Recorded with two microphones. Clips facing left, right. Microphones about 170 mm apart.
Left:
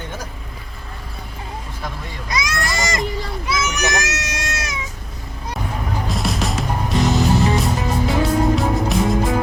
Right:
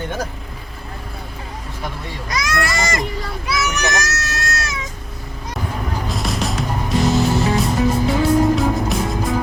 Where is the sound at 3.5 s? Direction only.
20° left (ahead or behind).